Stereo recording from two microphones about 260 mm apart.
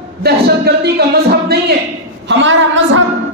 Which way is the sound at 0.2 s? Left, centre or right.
Right.